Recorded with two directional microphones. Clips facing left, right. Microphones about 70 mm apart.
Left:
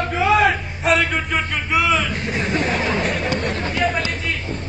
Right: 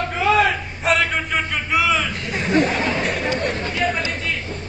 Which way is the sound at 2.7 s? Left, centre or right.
Left.